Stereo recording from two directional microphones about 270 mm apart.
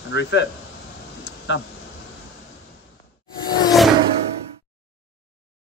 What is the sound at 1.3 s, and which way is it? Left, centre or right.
Vehicle, left.